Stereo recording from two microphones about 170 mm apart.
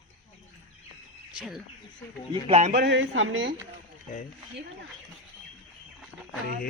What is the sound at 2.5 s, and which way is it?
Speech, 40° right (ahead or behind).